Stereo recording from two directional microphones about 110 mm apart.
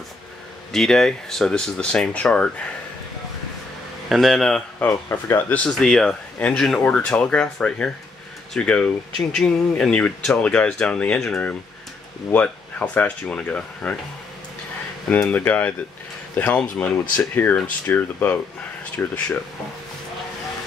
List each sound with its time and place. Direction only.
0.7 s speech: 5° left (ahead or behind)
4.1 s speech: centre (ahead or behind)
4.7 s speech: 20° left (ahead or behind)
15.0 s speech: 15° left (ahead or behind)